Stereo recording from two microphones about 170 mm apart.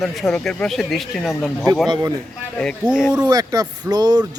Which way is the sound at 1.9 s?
20° right (ahead or behind).